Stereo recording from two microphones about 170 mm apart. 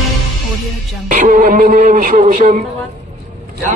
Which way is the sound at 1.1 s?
50° right (ahead or behind).